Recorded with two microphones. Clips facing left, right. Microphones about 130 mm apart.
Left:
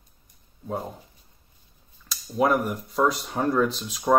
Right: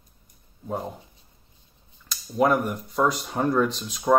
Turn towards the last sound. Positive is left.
turn(degrees=0)  # may be behind; listen again after turning